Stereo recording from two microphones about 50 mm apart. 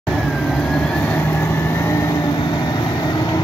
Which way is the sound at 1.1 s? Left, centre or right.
Left.